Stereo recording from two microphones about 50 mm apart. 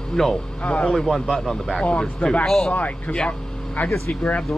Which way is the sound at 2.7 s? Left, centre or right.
Left.